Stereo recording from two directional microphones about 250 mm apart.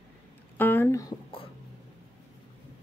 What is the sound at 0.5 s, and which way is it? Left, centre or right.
Speech, centre.